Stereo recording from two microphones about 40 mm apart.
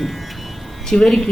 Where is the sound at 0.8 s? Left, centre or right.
Centre.